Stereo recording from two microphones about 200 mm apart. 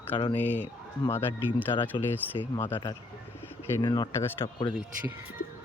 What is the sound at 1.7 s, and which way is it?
Speech, 10° left (ahead or behind).